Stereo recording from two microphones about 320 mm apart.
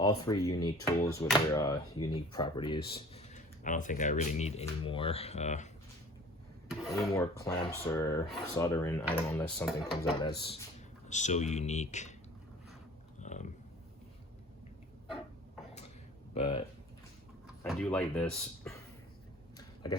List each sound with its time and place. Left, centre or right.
0.3 s speech: centre
6.7 s speech: centre
10.4 s speech: centre
13.1 s a sound: left
16.3 s speech: centre
17.6 s speech: centre
19.5 s a sound: centre